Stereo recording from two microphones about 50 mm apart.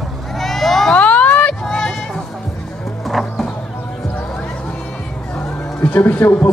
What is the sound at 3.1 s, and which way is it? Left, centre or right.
Music, centre.